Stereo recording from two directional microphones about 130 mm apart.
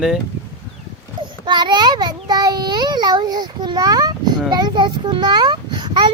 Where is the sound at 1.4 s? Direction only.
35° right (ahead or behind).